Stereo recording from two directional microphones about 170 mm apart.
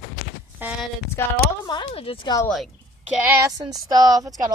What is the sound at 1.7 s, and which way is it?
Speech, 30° left (ahead or behind).